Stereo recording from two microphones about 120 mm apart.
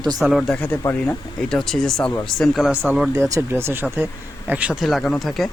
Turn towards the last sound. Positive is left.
turn(degrees=0)  # may be behind; listen again after turning